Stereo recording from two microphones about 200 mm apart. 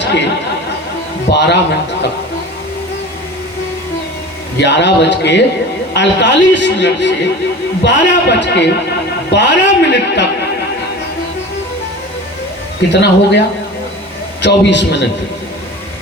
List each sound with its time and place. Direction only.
0.0 s chatter: 60° left (ahead or behind)
1.3 s a man's voice: 60° left (ahead or behind)
4.5 s a man's voice: 60° left (ahead or behind)
12.9 s a man's voice: 60° left (ahead or behind)
14.4 s a man's voice: 60° left (ahead or behind)